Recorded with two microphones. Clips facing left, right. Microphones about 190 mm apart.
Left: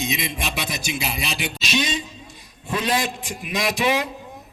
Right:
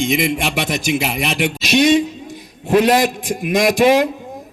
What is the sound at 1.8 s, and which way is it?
A man's voice, 75° right (ahead or behind).